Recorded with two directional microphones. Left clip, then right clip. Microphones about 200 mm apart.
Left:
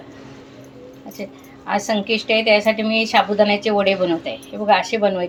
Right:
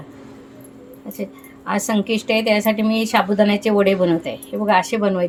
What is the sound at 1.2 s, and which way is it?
A woman's voice, 50° right (ahead or behind).